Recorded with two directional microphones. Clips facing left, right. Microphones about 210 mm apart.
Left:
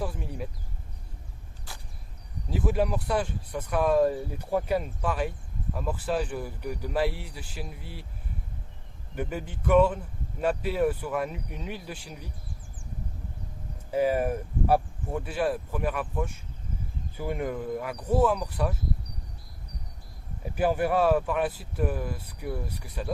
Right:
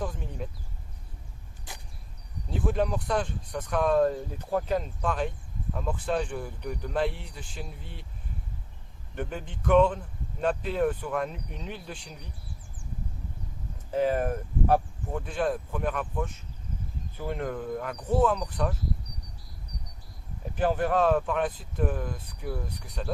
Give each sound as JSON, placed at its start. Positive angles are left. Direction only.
{"t": 0.0, "sound": "speech", "side_deg": 10}
{"t": 1.7, "sound": "vehicle", "side_deg": -20}
{"t": 2.5, "sound": "speech", "side_deg": 5}
{"t": 9.1, "sound": "speech", "side_deg": 5}
{"t": 13.9, "sound": "speech", "side_deg": 10}
{"t": 20.6, "sound": "speech", "side_deg": 10}